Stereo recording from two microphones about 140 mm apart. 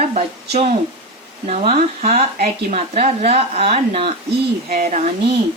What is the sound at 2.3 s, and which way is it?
Speech, 90° right.